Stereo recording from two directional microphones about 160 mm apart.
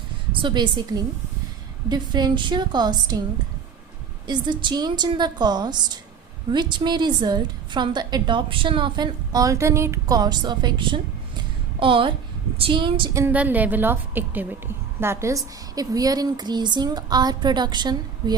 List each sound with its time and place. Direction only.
0.3 s a woman's voice: 30° right (ahead or behind)
4.3 s a woman's voice: 30° right (ahead or behind)
13.1 s a woman's voice: 10° right (ahead or behind)